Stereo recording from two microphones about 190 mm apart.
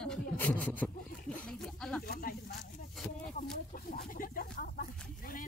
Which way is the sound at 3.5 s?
50° left (ahead or behind).